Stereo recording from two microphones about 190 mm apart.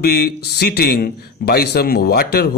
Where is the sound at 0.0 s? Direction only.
55° left (ahead or behind).